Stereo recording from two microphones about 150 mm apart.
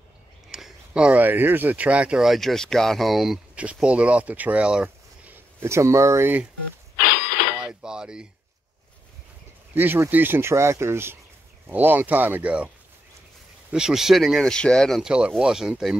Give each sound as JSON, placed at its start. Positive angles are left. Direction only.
{"t": 0.5, "sound": "speech", "side_deg": 0}
{"t": 7.1, "sound": "a sound", "side_deg": 80}
{"t": 7.6, "sound": "dishes", "side_deg": -5}
{"t": 9.8, "sound": "speech", "side_deg": -15}